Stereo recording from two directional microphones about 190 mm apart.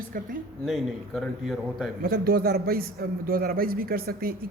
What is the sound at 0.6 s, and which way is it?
A man's voice, centre (ahead or behind).